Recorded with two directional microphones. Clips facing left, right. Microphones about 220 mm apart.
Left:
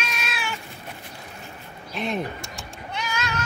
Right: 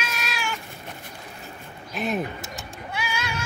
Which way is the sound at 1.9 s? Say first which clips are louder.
Right 1 dB; 5° right (ahead or behind).